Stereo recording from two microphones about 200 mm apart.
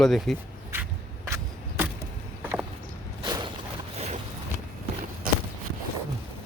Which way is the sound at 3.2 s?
20° right (ahead or behind).